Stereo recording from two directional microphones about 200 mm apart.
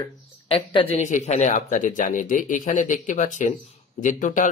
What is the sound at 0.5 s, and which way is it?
Speech, 30° left (ahead or behind).